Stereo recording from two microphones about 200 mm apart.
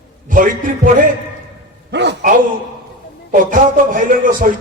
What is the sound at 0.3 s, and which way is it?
Speech, 40° right (ahead or behind).